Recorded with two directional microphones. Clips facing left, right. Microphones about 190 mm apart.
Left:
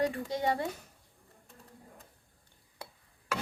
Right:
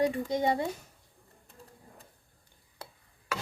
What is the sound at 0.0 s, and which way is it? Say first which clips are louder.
Speech: right 3 dB; 15° right (ahead or behind).